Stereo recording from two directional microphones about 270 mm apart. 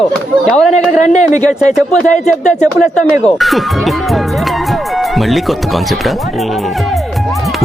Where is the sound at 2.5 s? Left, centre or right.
Centre.